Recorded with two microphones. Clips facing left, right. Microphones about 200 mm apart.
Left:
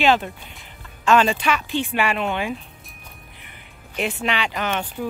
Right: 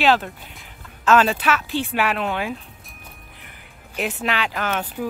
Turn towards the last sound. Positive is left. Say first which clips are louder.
# even
turn(degrees=-5)  # may be behind; listen again after turning